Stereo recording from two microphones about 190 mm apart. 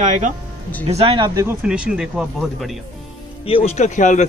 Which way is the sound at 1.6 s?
5° right (ahead or behind).